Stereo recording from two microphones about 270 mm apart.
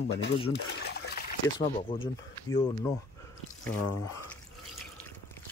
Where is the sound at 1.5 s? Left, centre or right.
Centre.